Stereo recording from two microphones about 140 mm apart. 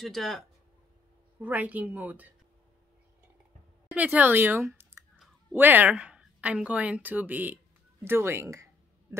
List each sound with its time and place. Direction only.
0.0 s speech: centre (ahead or behind)
1.4 s speech: 10° right (ahead or behind)
3.9 s speech: 10° right (ahead or behind)